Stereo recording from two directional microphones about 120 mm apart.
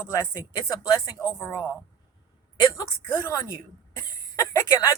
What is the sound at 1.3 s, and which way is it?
Speech, 20° left (ahead or behind).